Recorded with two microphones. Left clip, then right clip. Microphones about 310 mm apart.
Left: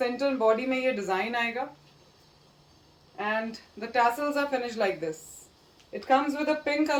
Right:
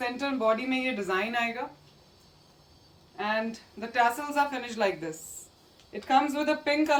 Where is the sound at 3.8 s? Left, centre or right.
Centre.